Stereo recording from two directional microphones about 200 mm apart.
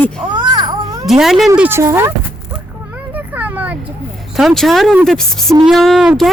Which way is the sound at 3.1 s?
10° right (ahead or behind).